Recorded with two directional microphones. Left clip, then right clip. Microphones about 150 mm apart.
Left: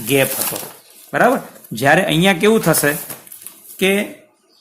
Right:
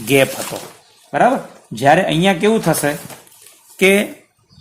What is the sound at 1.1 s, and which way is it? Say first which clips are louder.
Speech: even; centre (ahead or behind).